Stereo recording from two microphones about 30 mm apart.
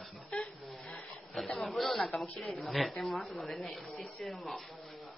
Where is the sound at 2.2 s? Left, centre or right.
Left.